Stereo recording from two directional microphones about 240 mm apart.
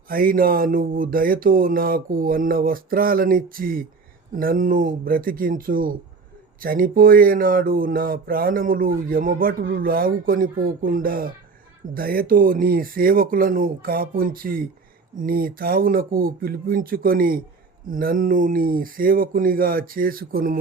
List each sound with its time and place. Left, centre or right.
0.1 s speech: right